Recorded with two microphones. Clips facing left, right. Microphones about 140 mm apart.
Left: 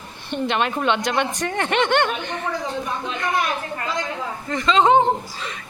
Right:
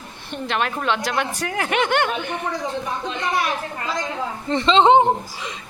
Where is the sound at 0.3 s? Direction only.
Centre (ahead or behind).